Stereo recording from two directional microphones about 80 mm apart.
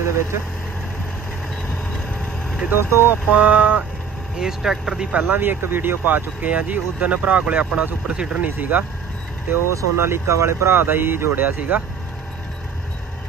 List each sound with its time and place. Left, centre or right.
2.7 s speech: right
3.3 s speech: centre
5.3 s speech: right
9.5 s speech: right